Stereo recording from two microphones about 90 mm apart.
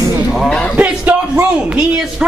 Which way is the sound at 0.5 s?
10° left (ahead or behind).